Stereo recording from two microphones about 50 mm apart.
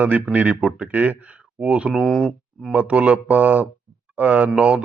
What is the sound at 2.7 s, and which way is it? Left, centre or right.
Speech, right.